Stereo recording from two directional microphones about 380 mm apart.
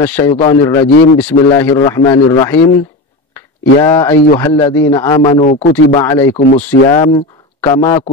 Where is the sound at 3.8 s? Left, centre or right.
Centre.